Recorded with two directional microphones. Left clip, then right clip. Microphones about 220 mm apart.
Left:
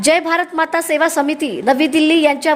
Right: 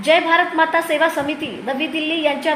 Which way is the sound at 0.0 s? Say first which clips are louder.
Even; 45° left (ahead or behind).